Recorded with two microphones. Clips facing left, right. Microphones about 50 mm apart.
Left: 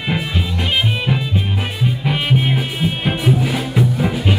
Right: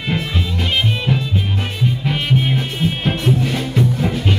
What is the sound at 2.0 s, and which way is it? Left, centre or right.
Music, centre.